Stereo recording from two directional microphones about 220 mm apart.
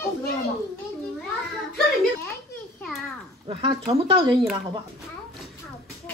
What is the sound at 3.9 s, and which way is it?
Speech, 25° right (ahead or behind).